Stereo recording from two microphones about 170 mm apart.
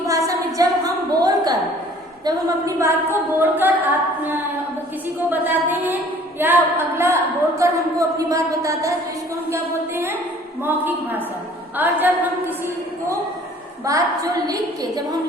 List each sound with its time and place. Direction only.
0.1 s a sound: 20° right (ahead or behind)
2.2 s a woman's voice: 20° right (ahead or behind)
5.3 s a woman's voice: 10° right (ahead or behind)